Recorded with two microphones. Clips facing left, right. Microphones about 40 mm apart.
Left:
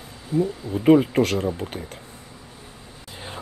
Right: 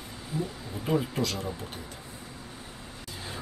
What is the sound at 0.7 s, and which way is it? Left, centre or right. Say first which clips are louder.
Speech: left 12 dB; left.